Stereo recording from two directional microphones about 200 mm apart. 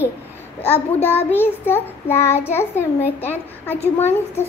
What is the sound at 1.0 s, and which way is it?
A child's voice, 10° left (ahead or behind).